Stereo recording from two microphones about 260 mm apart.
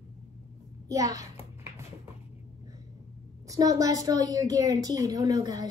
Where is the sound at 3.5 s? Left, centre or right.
Centre.